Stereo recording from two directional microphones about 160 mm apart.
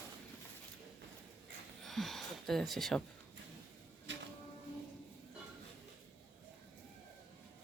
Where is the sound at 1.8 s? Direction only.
Centre (ahead or behind).